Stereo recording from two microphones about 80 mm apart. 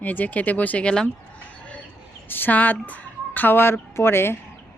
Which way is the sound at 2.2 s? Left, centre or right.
Left.